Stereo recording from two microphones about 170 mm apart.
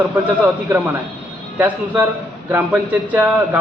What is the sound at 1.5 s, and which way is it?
A man's voice, 10° right (ahead or behind).